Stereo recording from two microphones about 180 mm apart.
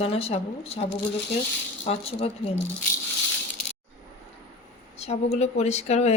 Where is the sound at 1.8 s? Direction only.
35° left (ahead or behind).